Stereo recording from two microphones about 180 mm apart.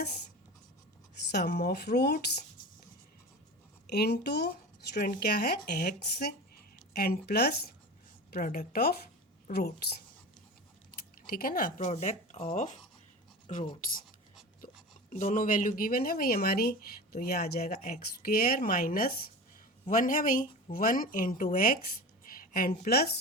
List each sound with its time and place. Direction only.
1.3 s speech: 65° left (ahead or behind)
3.8 s speech: 65° left (ahead or behind)
8.3 s speech: 50° left (ahead or behind)
11.3 s speech: 55° left (ahead or behind)
15.1 s a woman's voice: 45° left (ahead or behind)